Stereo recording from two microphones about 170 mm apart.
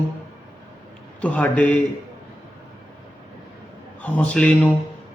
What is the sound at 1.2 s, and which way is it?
Speech, 5° left (ahead or behind).